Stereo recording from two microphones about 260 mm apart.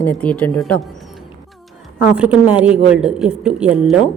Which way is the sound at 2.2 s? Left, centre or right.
Centre.